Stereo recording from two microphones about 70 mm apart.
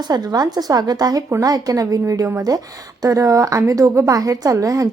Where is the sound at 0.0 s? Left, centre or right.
Right.